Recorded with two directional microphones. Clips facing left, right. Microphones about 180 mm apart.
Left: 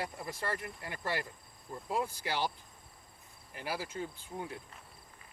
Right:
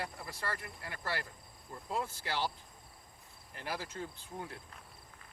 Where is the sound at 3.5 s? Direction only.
10° left (ahead or behind).